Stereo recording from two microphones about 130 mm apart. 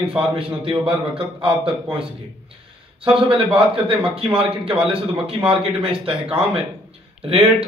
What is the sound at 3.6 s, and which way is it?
A man's voice, 45° right (ahead or behind).